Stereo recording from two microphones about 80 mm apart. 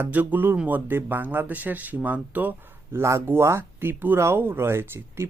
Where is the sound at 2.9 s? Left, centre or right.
Right.